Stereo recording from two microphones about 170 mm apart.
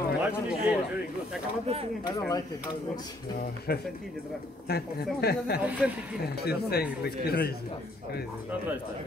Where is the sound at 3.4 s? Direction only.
65° left (ahead or behind).